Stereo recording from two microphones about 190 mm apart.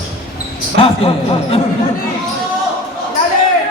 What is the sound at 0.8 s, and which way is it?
Speech, 30° left (ahead or behind).